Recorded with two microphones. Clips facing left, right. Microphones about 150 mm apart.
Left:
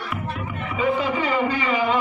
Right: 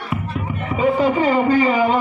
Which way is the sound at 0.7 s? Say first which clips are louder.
Right 6 dB; 40° right (ahead or behind).